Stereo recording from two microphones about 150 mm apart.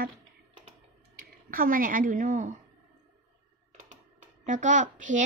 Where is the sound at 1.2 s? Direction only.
70° right (ahead or behind); by 2.5 s 55° right (ahead or behind).